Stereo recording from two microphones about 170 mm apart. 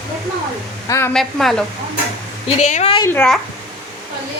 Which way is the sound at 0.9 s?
15° left (ahead or behind).